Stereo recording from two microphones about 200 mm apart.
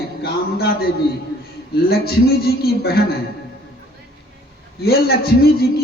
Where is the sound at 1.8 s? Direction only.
50° left (ahead or behind).